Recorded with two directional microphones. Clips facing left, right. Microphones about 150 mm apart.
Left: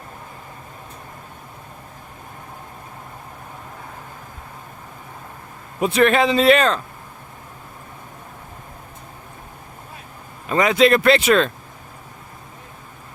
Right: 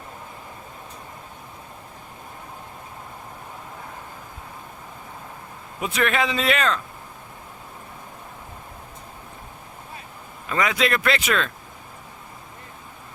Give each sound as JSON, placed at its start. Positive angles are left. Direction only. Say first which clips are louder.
{"t": 5.8, "sound": "speech", "louder": "left 7 dB", "side_deg": 35}
{"t": 10.5, "sound": "speech", "louder": "left 7 dB", "side_deg": 30}